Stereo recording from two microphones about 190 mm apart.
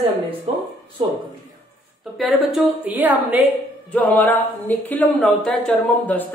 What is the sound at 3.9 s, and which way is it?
A woman's voice, 10° left (ahead or behind).